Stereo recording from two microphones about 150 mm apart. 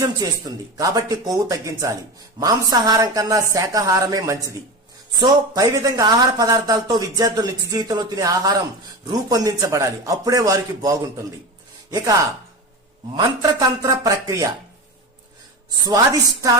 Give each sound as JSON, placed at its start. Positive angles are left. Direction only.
{"t": 0.0, "sound": "speech", "side_deg": -25}
{"t": 13.1, "sound": "speech", "side_deg": -25}